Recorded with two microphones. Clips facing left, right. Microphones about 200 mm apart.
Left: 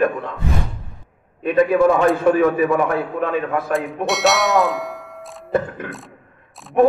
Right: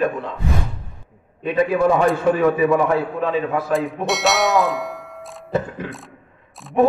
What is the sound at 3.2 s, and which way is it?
Speech, 55° left (ahead or behind).